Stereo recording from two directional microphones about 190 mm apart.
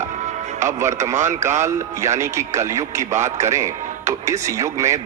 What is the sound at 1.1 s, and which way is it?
Speech, 40° right (ahead or behind).